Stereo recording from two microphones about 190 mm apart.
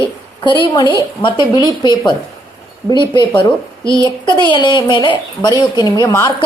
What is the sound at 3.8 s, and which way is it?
Speech, 20° right (ahead or behind).